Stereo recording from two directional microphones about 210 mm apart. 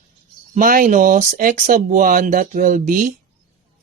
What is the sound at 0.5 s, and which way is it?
Speech, 40° right (ahead or behind).